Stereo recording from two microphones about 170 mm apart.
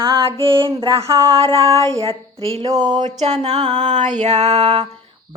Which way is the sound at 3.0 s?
40° right (ahead or behind).